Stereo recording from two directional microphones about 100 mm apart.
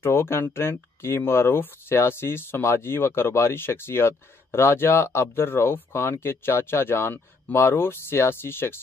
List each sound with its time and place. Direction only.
0.0 s speech: 25° left (ahead or behind)